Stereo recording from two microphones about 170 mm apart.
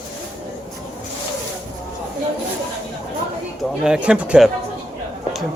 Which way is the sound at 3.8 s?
5° right (ahead or behind).